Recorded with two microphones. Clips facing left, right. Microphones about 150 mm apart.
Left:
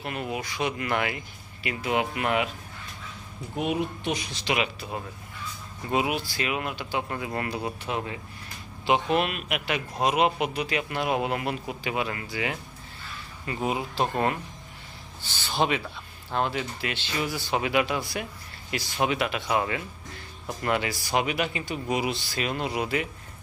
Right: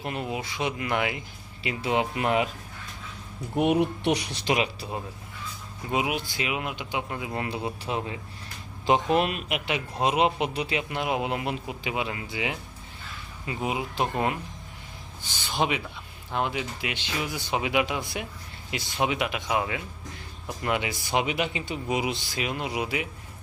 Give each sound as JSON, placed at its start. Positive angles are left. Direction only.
{"t": 0.0, "sound": "speech", "side_deg": -30}
{"t": 1.6, "sound": "speech", "side_deg": -25}
{"t": 3.6, "sound": "speech", "side_deg": -70}
{"t": 4.4, "sound": "speech", "side_deg": -35}
{"t": 5.9, "sound": "speech", "side_deg": -15}
{"t": 7.4, "sound": "speech", "side_deg": -25}
{"t": 9.5, "sound": "speech", "side_deg": -20}
{"t": 10.8, "sound": "speech", "side_deg": -20}
{"t": 15.2, "sound": "speech", "side_deg": -15}